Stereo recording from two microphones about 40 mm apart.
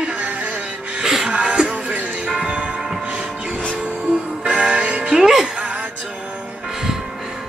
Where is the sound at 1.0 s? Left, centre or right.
Centre.